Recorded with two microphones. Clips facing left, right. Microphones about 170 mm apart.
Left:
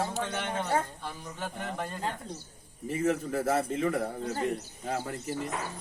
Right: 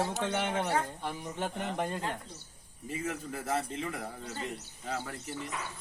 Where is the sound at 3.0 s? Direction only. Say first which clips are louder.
Left 10 dB; 45° left (ahead or behind).